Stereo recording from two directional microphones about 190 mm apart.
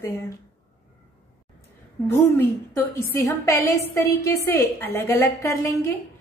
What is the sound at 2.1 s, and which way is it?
A woman's voice, 10° left (ahead or behind).